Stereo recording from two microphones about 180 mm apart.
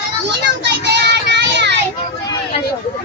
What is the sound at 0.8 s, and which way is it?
Child singing, 70° right (ahead or behind).